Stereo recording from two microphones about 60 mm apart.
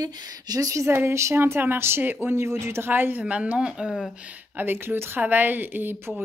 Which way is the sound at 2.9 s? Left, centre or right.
Right.